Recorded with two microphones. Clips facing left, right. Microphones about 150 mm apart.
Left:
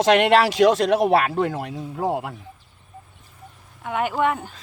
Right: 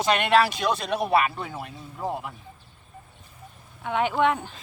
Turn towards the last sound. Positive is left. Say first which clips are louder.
# left 1 dB
turn(degrees=5)  # may be behind; listen again after turning